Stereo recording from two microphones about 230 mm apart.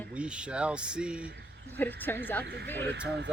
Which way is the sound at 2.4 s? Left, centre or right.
Right.